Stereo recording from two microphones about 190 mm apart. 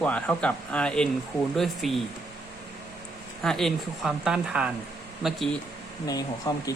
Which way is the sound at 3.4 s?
Centre (ahead or behind).